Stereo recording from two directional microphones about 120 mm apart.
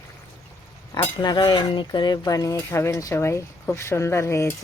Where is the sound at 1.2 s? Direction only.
40° left (ahead or behind); by 4.6 s 25° left (ahead or behind).